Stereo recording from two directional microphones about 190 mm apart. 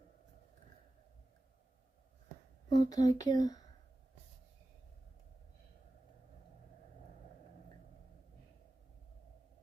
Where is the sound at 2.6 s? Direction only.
20° left (ahead or behind).